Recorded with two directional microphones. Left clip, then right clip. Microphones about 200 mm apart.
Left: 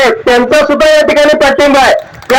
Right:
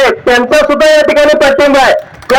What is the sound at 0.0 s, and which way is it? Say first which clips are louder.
A man's voice: even; 15° left (ahead or behind).